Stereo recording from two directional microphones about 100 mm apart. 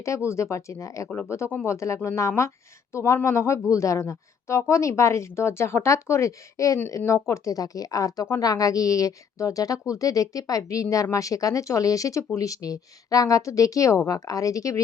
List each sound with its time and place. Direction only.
0.3 s speech: 30° left (ahead or behind)